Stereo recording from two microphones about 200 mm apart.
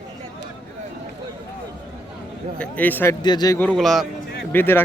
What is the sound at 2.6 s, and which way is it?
Speech, 10° left (ahead or behind).